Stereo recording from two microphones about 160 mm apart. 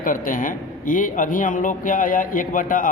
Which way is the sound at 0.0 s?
55° left (ahead or behind).